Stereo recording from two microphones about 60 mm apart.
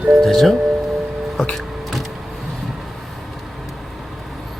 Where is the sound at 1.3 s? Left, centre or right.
Centre.